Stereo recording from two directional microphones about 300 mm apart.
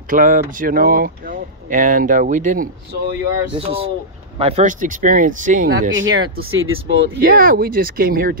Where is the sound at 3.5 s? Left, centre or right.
Centre.